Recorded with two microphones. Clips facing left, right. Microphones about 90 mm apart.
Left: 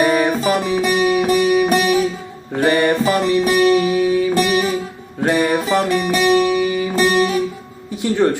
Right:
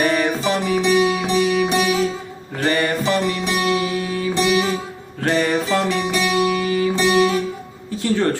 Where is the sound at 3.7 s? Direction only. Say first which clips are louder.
Left 6 dB; 20° left (ahead or behind).